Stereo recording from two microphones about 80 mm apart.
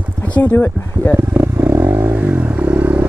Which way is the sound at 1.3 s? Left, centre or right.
Right.